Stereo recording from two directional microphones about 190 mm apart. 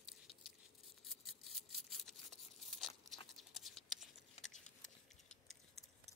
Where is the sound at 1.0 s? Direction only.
Centre (ahead or behind).